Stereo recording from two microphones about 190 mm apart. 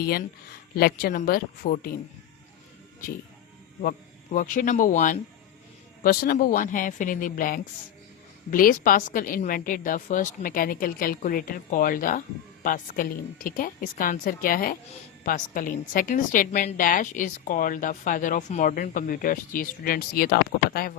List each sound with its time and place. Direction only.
0.0 s a woman's voice: 55° left (ahead or behind)
3.8 s a woman's voice: 45° left (ahead or behind)